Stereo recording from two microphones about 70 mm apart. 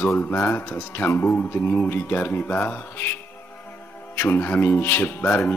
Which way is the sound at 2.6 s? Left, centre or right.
Left.